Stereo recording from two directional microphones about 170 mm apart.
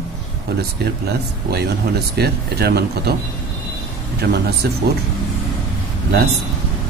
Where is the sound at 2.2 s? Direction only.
70° right (ahead or behind).